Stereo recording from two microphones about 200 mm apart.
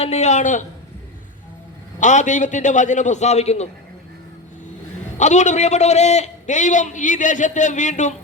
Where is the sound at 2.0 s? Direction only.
40° left (ahead or behind).